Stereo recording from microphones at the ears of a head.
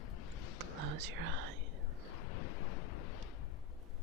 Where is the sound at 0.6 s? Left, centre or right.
Right.